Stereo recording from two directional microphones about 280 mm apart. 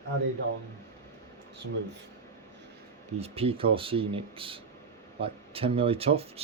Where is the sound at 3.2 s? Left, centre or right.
Centre.